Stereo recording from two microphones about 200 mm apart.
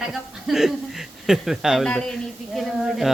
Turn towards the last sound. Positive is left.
turn(degrees=0)  # may be behind; listen again after turning